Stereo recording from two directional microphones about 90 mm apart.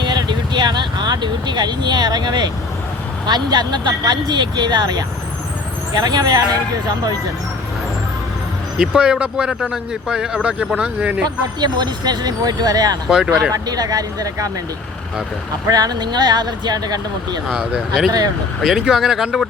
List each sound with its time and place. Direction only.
0.0 s vehicle: 55° right (ahead or behind)
3.2 s speech: 50° right (ahead or behind)
8.8 s speech: 10° right (ahead or behind)
11.6 s speech: 50° right (ahead or behind)
13.1 s speech: 10° right (ahead or behind)
13.5 s speech: 45° right (ahead or behind)
15.7 s speech: 50° right (ahead or behind)
17.5 s speech: 5° right (ahead or behind)